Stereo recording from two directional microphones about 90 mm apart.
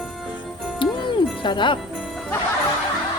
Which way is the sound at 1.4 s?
60° left (ahead or behind).